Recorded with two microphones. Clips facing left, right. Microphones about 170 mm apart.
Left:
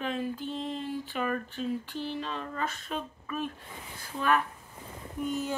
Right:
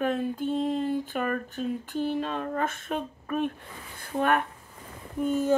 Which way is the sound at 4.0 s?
60° right (ahead or behind).